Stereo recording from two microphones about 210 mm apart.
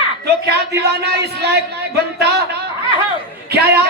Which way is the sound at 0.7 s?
50° right (ahead or behind).